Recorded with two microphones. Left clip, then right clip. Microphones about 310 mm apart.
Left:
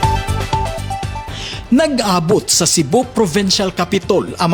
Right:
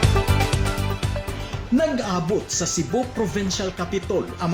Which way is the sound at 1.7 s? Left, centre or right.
Left.